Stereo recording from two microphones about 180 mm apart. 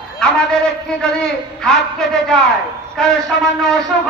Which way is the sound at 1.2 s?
5° left (ahead or behind).